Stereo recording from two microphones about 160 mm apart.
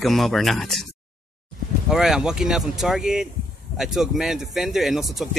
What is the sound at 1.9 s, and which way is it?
Speech, 5° right (ahead or behind).